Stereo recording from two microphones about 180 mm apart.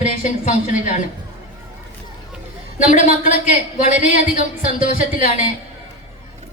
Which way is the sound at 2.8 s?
45° left (ahead or behind).